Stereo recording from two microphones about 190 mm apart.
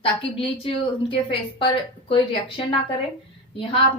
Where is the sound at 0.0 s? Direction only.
30° left (ahead or behind).